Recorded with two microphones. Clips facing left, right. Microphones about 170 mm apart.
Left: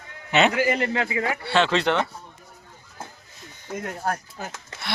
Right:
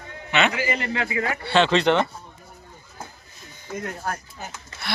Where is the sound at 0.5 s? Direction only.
55° left (ahead or behind).